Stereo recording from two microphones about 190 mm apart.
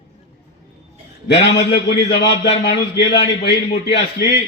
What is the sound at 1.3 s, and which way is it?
A man's voice, 65° left (ahead or behind).